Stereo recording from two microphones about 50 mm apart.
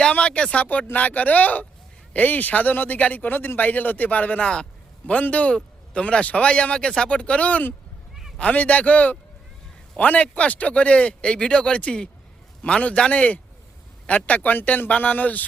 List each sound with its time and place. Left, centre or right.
0.1 s speech: left